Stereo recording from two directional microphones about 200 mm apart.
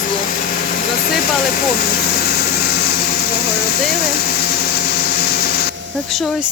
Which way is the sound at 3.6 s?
50° left (ahead or behind).